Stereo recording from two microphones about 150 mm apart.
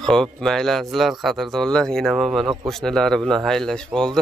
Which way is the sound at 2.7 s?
Centre (ahead or behind).